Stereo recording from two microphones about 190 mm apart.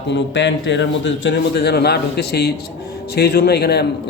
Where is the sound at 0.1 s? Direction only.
70° left (ahead or behind).